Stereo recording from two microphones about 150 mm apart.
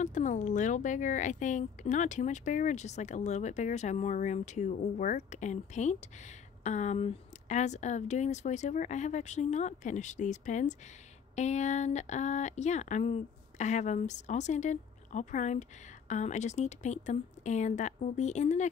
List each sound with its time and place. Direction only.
0.0 s speech: 55° left (ahead or behind)